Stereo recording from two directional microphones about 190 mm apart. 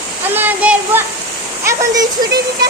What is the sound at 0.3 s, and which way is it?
Speech, 10° right (ahead or behind).